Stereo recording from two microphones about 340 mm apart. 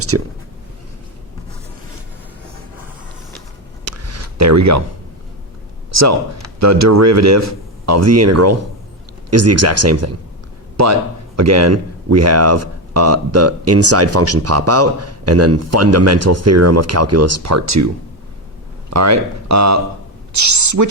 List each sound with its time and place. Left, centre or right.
0.1 s speech: right
3.8 s a sound: right
5.9 s a man's voice: right
18.9 s a woman's voice: right